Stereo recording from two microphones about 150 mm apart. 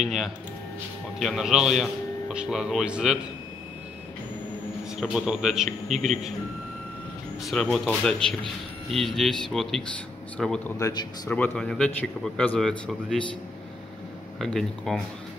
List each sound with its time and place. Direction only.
0.0 s a man's voice: centre (ahead or behind)
5.0 s a man's voice: 5° right (ahead or behind)
7.4 s a man's voice: 5° left (ahead or behind)
10.8 s speech: 30° left (ahead or behind)
11.2 s speech: 10° left (ahead or behind)
14.4 s a man's voice: centre (ahead or behind)